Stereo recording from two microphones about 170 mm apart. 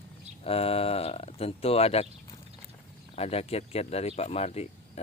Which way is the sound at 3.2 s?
35° left (ahead or behind).